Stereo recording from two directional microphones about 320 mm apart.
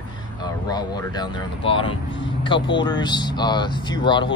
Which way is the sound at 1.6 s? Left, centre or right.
Centre.